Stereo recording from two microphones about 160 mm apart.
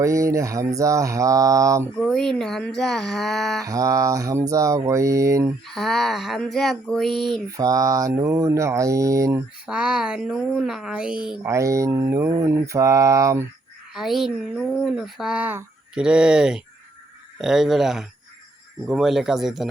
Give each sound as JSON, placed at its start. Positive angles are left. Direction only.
{"t": 0.0, "sound": "mantra", "side_deg": -20}
{"t": 2.0, "sound": "speech", "side_deg": 5}
{"t": 3.6, "sound": "mantra", "side_deg": -20}
{"t": 5.6, "sound": "speech", "side_deg": 0}
{"t": 7.5, "sound": "mantra", "side_deg": -20}
{"t": 9.6, "sound": "speech", "side_deg": -5}
{"t": 11.4, "sound": "mantra", "side_deg": -20}
{"t": 13.9, "sound": "speech", "side_deg": 0}